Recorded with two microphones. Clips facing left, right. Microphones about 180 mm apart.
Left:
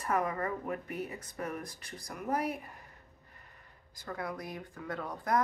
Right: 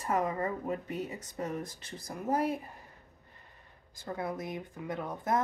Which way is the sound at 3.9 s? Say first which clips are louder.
Right 3 dB; 25° right (ahead or behind).